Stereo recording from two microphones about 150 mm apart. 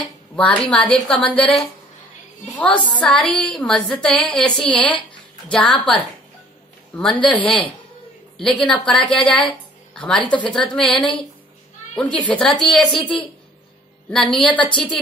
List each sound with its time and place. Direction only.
0.4 s a woman's voice: 5° left (ahead or behind)
7.0 s a woman's voice: 10° left (ahead or behind)
14.1 s a woman's voice: 5° left (ahead or behind)
14.6 s a woman's voice: 35° left (ahead or behind)